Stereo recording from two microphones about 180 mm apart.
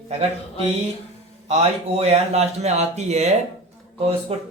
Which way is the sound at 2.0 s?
35° right (ahead or behind).